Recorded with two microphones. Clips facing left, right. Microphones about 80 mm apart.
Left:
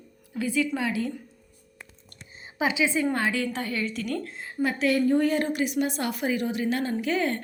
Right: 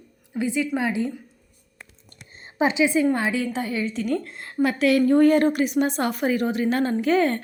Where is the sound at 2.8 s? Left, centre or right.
Centre.